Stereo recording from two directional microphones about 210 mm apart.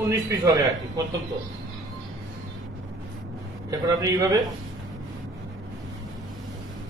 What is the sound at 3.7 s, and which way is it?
Speech, 15° right (ahead or behind).